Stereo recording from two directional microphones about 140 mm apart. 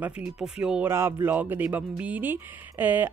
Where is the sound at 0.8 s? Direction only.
20° right (ahead or behind).